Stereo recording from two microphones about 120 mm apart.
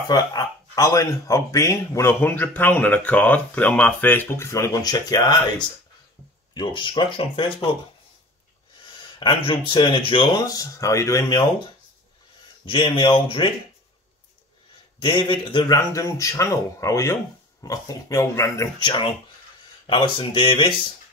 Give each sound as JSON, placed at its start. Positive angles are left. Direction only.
{"t": 0.1, "sound": "speech", "side_deg": 30}
{"t": 6.5, "sound": "speech", "side_deg": 40}
{"t": 9.2, "sound": "speech", "side_deg": 45}
{"t": 12.6, "sound": "speech", "side_deg": 45}
{"t": 15.0, "sound": "speech", "side_deg": 40}
{"t": 15.7, "sound": "speech", "side_deg": 25}
{"t": 18.8, "sound": "speech", "side_deg": 40}